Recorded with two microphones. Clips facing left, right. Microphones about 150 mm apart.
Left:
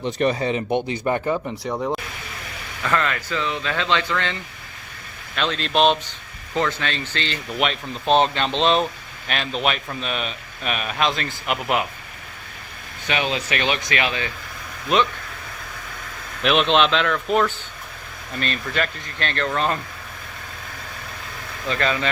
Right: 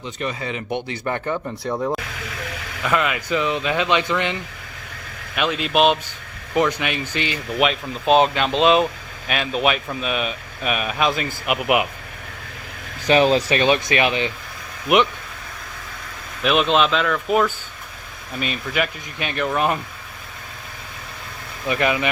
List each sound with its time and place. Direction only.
0.3 s speech: 30° left (ahead or behind)
1.6 s speech: centre (ahead or behind)
2.8 s speech: 10° right (ahead or behind)
13.1 s speech: 35° right (ahead or behind)
13.6 s speech: 20° right (ahead or behind)
16.4 s speech: 5° right (ahead or behind)
21.7 s speech: 15° right (ahead or behind)